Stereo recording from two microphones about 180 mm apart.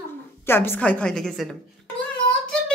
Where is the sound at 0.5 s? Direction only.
10° left (ahead or behind).